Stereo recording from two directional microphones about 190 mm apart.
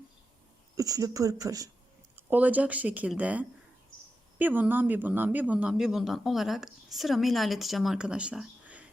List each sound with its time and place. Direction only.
0.8 s speech: 20° right (ahead or behind)